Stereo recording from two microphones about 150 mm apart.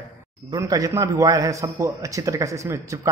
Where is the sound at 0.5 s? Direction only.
25° right (ahead or behind).